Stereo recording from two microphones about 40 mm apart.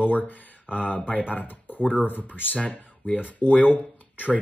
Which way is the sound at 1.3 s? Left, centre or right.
Left.